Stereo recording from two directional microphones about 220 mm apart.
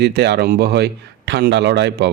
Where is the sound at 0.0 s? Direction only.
50° right (ahead or behind).